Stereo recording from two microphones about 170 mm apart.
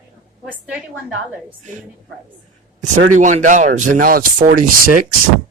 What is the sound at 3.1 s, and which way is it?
Speech, 45° right (ahead or behind).